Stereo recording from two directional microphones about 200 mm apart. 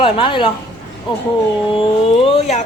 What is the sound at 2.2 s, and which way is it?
Speech, 30° left (ahead or behind).